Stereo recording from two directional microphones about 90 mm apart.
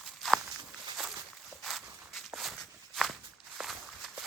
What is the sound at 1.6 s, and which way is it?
Walk, centre (ahead or behind).